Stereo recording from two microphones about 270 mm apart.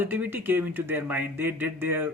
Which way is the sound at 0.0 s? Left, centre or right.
Centre.